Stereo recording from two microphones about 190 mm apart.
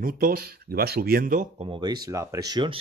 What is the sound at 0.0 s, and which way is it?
Speech, 50° right (ahead or behind).